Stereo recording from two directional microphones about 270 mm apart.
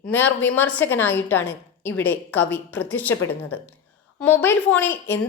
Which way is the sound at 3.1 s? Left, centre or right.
Left.